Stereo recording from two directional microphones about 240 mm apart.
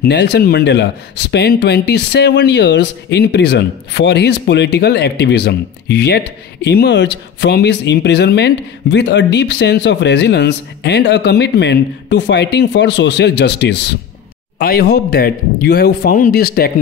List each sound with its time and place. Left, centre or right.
0.0 s speech: left